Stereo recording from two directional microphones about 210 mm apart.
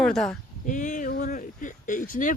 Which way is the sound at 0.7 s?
40° left (ahead or behind).